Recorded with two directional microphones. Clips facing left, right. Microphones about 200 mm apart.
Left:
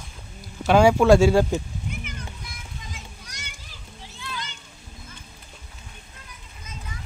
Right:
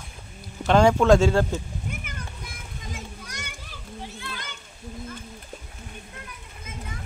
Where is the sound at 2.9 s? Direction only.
55° right (ahead or behind).